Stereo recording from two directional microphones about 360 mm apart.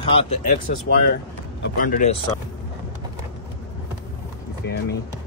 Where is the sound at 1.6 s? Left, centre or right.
Left.